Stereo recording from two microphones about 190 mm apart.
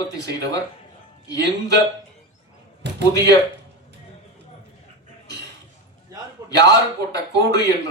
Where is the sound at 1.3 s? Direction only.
20° left (ahead or behind).